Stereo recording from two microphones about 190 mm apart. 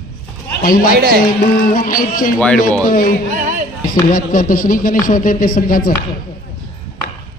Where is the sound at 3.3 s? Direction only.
45° right (ahead or behind).